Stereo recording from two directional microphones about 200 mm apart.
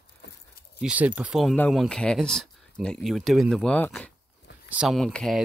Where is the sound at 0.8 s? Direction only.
5° right (ahead or behind).